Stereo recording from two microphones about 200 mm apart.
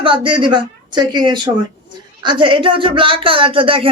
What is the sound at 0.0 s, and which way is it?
Speech, 25° right (ahead or behind).